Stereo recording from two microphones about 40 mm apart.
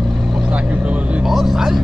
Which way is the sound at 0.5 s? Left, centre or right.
Right.